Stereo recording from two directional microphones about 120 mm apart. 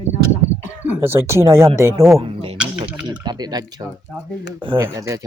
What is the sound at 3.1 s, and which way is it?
Speech, 35° right (ahead or behind).